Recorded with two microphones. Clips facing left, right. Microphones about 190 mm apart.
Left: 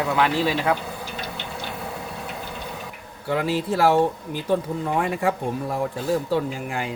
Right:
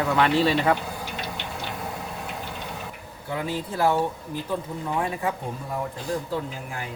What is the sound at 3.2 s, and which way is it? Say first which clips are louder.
Speech: left 6 dB; 80° left.